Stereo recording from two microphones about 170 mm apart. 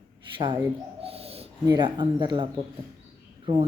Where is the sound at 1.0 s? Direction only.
35° right (ahead or behind).